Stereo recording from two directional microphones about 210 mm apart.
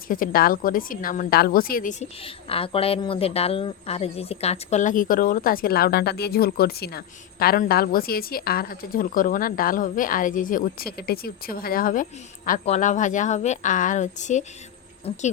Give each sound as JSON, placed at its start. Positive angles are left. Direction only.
{"t": 0.1, "sound": "a woman's voice", "side_deg": 40}